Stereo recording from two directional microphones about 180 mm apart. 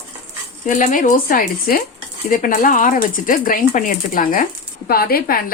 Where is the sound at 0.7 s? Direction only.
45° left (ahead or behind).